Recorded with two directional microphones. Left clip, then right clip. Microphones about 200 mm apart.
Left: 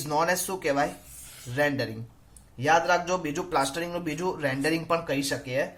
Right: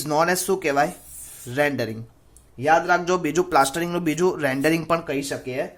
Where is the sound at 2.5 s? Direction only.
30° right (ahead or behind).